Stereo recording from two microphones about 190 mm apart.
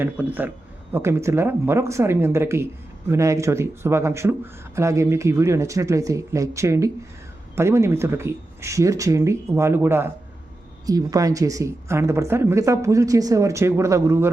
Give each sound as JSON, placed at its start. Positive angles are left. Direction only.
{"t": 0.0, "sound": "speech", "side_deg": -10}